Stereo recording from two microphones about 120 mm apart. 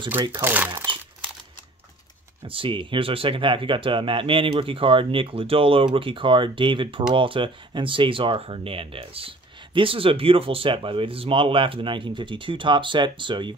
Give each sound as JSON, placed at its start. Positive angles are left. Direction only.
{"t": 0.3, "sound": "speech", "side_deg": -15}
{"t": 2.4, "sound": "speech", "side_deg": -45}